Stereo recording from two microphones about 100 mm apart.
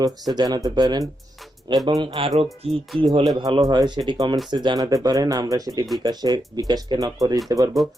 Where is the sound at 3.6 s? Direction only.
40° right (ahead or behind).